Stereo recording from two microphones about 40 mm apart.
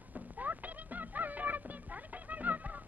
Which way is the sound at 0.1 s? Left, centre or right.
Right.